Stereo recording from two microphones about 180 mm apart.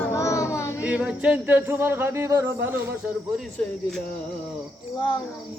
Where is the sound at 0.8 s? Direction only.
5° right (ahead or behind).